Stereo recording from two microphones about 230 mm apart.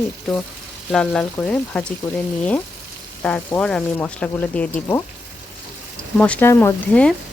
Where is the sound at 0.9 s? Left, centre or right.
Centre.